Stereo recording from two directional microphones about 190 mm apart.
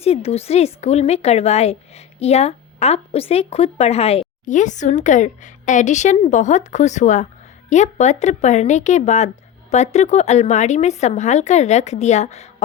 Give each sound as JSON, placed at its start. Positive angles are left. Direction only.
{"t": 0.0, "sound": "speech", "side_deg": 35}